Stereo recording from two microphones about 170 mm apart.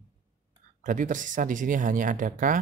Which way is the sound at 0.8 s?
50° right (ahead or behind).